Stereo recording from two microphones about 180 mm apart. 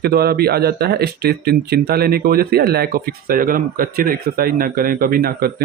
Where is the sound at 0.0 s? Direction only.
60° right (ahead or behind).